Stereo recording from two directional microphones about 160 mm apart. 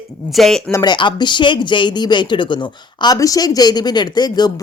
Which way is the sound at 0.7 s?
25° left (ahead or behind).